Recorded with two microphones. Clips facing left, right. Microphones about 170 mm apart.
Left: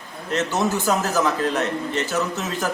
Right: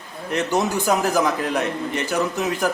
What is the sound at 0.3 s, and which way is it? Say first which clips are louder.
A man's voice: right 1 dB; 15° right (ahead or behind).